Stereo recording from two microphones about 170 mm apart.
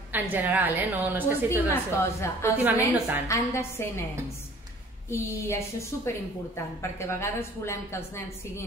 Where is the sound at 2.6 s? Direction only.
10° right (ahead or behind).